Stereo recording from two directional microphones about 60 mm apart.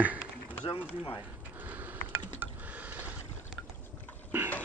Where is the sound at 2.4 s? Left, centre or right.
Right.